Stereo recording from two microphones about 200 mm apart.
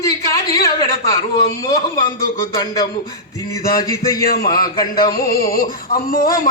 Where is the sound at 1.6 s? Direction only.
15° left (ahead or behind).